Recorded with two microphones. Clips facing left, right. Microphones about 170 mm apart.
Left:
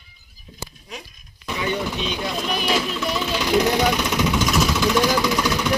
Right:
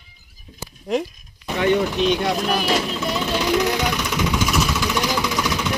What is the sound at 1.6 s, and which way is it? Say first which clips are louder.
Speech: right 7 dB; 65° right (ahead or behind).